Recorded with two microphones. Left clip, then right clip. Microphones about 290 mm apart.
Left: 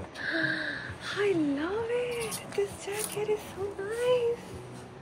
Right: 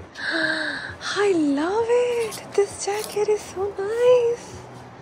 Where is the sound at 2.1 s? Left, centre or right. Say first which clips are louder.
Right 10 dB; right.